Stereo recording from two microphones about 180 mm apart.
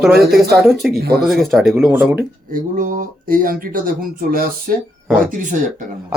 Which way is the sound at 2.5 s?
50° right (ahead or behind).